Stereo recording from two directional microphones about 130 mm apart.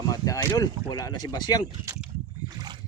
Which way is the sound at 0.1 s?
30° left (ahead or behind).